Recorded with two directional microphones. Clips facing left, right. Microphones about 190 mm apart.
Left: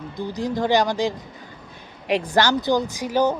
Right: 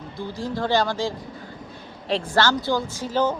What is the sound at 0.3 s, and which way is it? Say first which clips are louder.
Speech: left 3 dB; 15° left (ahead or behind).